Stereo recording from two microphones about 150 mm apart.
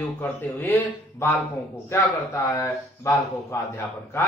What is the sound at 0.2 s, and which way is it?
Speech, 10° left (ahead or behind).